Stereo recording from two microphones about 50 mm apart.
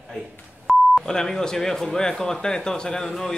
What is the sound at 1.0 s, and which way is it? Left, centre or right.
A man's voice, centre.